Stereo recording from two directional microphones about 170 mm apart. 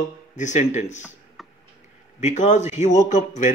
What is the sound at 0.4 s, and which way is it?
Speech, 45° left (ahead or behind).